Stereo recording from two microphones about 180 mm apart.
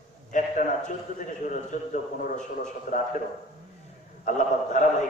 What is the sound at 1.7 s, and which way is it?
A man's voice, 45° left (ahead or behind).